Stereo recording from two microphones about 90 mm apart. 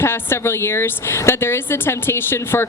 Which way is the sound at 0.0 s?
25° left (ahead or behind).